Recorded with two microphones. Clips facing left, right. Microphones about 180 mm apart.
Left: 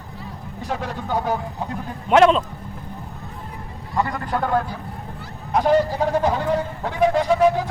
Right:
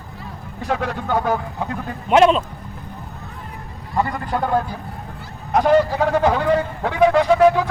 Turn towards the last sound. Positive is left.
turn(degrees=-75)  # may be behind; listen again after turning